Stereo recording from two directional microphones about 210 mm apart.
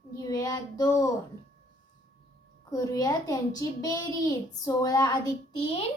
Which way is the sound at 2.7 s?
15° left (ahead or behind).